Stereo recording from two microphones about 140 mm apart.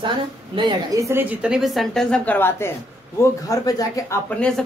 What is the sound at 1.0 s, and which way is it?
Speech, 15° right (ahead or behind).